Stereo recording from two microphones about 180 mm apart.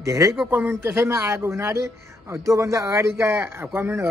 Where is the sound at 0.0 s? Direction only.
15° right (ahead or behind).